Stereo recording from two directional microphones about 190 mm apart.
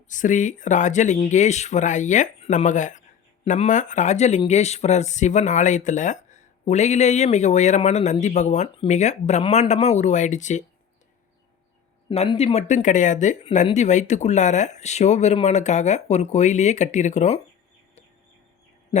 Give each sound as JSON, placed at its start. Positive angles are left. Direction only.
{"t": 0.1, "sound": "speech", "side_deg": 40}
{"t": 12.0, "sound": "speech", "side_deg": 30}